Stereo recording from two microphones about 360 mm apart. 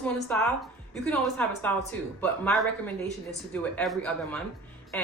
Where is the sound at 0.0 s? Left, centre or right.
Centre.